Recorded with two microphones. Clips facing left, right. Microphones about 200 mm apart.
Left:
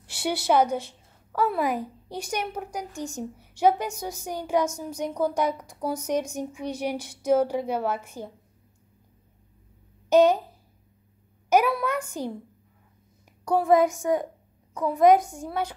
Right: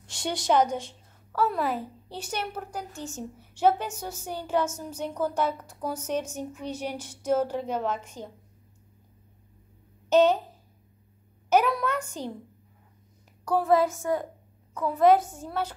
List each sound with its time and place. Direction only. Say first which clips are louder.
0.0 s a woman's voice: left 3 dB; 5° left (ahead or behind)
10.0 s speech: left 2 dB; 10° left (ahead or behind)
11.4 s a woman's voice: left 1 dB; 10° left (ahead or behind)
13.5 s a woman's voice: left 3 dB; 15° left (ahead or behind)